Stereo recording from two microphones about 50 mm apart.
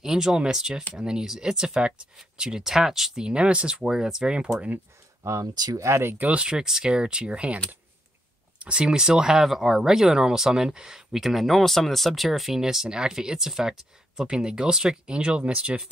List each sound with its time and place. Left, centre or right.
0.0 s speech: centre
5.2 s speech: right
6.2 s speech: right